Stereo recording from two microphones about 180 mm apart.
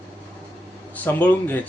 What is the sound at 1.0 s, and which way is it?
Speech, 10° left (ahead or behind).